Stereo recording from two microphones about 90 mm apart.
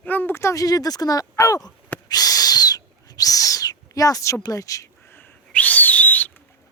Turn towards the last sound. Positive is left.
turn(degrees=20)  # may be behind; listen again after turning